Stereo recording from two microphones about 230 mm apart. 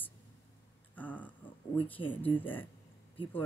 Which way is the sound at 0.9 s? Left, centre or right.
Centre.